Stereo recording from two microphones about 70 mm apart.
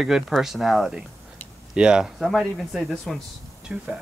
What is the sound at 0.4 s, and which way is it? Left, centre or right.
Speech, centre.